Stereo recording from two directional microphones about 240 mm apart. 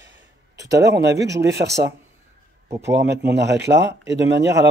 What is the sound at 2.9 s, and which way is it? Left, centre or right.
Speech, right.